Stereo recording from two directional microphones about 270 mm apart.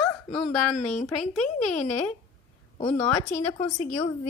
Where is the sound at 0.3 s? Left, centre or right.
Centre.